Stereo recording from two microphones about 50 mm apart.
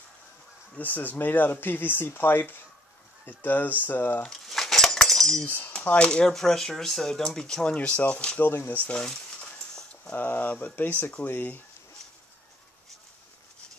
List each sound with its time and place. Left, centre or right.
0.7 s speech: left
4.3 s cutlery: centre
5.9 s speech: centre
7.7 s speech: left
8.4 s speech: left
8.9 s speech: centre
10.1 s speech: left